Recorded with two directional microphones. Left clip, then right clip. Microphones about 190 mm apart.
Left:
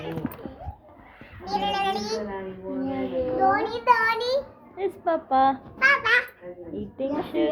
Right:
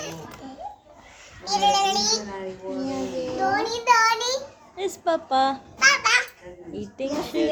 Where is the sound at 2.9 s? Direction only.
25° right (ahead or behind).